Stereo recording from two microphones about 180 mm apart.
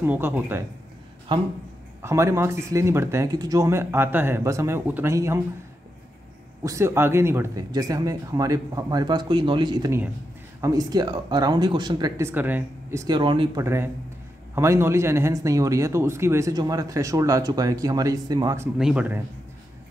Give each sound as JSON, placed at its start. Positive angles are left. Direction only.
{"t": 0.0, "sound": "speech", "side_deg": -10}
{"t": 2.0, "sound": "speech", "side_deg": -15}
{"t": 6.6, "sound": "speech", "side_deg": -15}
{"t": 13.6, "sound": "speech", "side_deg": -15}
{"t": 18.8, "sound": "speech", "side_deg": -5}